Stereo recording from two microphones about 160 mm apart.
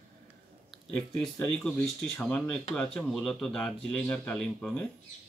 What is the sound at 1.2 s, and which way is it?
Speech, 5° left (ahead or behind).